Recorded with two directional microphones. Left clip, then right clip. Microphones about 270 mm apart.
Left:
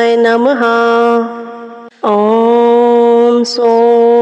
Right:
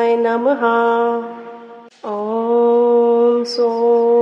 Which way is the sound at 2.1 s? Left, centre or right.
Left.